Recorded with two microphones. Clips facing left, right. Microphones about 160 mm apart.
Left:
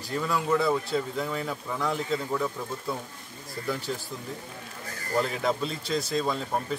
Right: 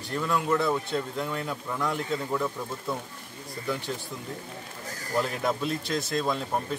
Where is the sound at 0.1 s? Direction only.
Centre (ahead or behind).